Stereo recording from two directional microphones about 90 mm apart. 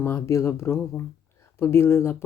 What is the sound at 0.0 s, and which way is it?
Speech, 30° left (ahead or behind).